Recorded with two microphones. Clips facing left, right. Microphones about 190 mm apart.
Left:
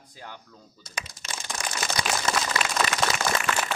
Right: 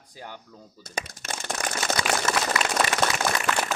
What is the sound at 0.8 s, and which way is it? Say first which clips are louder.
Speech: right 5 dB; 50° right (ahead or behind).